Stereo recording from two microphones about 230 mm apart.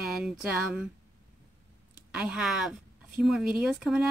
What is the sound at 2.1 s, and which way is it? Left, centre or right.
A woman's voice, centre.